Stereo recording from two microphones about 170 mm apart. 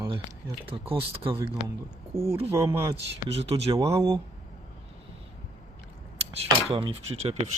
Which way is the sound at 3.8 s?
20° right (ahead or behind).